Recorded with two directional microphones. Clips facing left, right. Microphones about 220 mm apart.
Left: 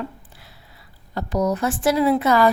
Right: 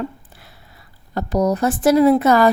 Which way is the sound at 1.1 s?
40° right (ahead or behind).